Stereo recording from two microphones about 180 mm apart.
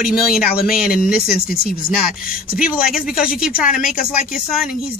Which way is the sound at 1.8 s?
55° left (ahead or behind).